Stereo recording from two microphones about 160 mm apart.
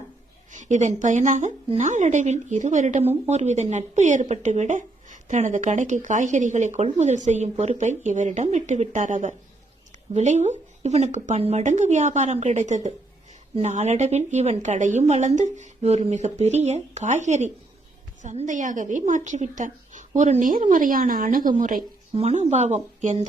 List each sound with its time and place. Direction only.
0.5 s speech: 50° right (ahead or behind)
22.1 s speech: 40° right (ahead or behind)